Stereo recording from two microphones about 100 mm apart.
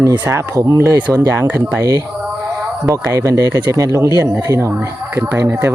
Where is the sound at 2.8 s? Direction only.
35° right (ahead or behind).